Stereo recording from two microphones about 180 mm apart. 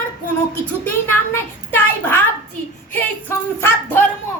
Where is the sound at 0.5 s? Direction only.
10° left (ahead or behind).